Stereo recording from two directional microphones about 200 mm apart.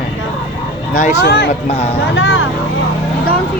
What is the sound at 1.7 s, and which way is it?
Speech, 30° left (ahead or behind).